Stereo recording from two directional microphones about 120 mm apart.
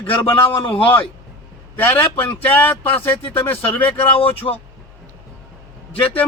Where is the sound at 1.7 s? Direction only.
15° left (ahead or behind).